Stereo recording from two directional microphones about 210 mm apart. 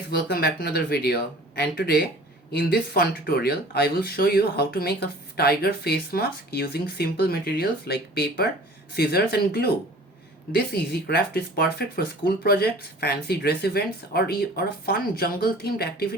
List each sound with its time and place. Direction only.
0.1 s speech: 50° left (ahead or behind)